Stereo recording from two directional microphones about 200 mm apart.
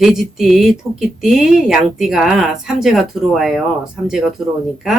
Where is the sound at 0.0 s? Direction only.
Centre (ahead or behind).